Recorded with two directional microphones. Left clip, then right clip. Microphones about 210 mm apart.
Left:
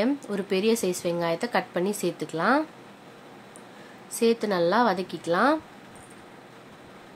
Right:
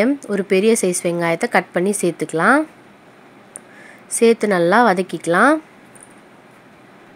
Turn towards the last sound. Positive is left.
turn(degrees=-30)  # may be behind; listen again after turning